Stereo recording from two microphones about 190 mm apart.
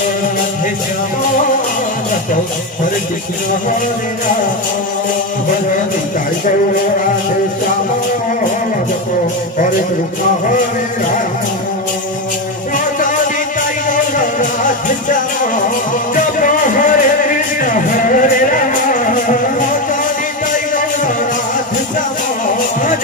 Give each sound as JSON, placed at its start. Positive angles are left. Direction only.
{"t": 14.1, "sound": "music", "side_deg": 45}
{"t": 16.3, "sound": "music", "side_deg": 45}